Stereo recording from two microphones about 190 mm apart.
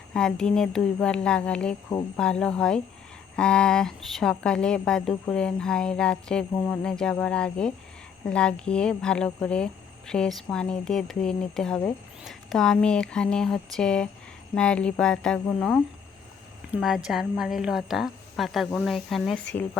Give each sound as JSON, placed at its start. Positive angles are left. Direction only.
{"t": 0.1, "sound": "speech", "side_deg": 5}